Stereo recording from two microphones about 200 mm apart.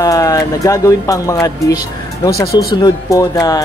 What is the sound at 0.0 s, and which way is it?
Speech, 15° left (ahead or behind).